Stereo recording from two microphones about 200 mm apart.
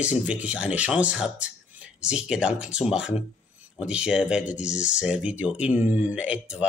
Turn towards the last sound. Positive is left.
turn(degrees=-5)  # may be behind; listen again after turning